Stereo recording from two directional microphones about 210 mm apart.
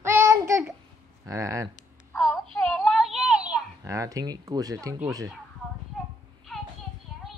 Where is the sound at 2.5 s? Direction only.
5° left (ahead or behind).